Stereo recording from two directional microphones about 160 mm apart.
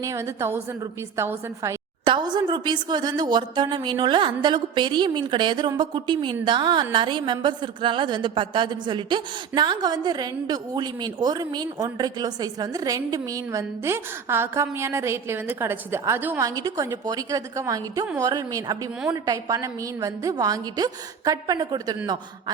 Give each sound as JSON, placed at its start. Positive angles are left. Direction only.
{"t": 0.0, "sound": "a woman's voice", "side_deg": -20}
{"t": 2.0, "sound": "a woman's voice", "side_deg": -30}